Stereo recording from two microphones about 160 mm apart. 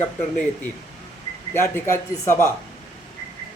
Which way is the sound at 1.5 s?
15° left (ahead or behind).